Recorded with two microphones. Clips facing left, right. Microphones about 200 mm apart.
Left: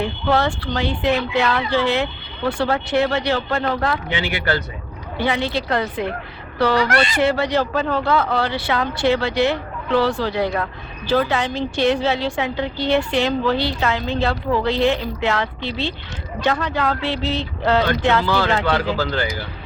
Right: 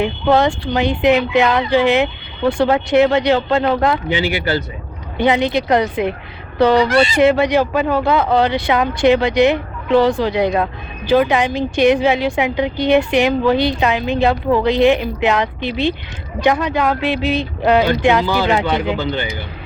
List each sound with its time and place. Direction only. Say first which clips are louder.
0.0 s speech: right 5 dB; 15° right (ahead or behind)
5.1 s speech: right 6 dB; 20° right (ahead or behind)